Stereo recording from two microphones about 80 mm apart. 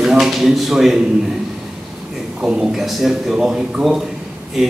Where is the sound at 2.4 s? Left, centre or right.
Centre.